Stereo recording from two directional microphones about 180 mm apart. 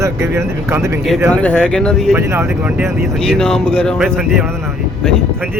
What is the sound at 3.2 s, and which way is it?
Speech, 5° left (ahead or behind).